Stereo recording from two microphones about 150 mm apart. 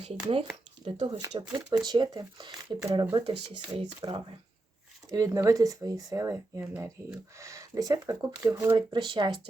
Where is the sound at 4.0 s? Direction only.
35° right (ahead or behind).